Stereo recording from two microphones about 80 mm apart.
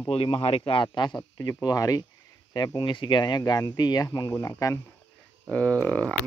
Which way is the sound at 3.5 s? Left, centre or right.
Left.